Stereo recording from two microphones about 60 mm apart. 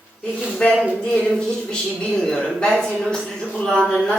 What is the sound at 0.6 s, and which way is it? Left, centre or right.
A woman's voice, centre.